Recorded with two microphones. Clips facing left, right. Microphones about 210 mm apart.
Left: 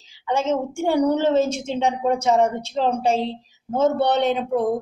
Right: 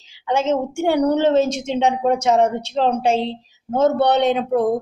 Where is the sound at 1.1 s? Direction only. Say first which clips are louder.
Right 3 dB; 70° right (ahead or behind).